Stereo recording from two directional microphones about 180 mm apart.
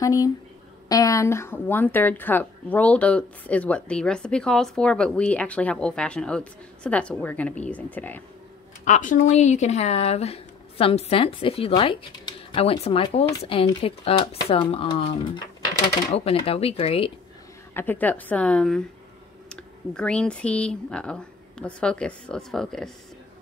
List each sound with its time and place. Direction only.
0.0 s a woman's voice: 20° left (ahead or behind)
8.8 s speech: 45° left (ahead or behind)
17.7 s a woman's voice: 10° left (ahead or behind)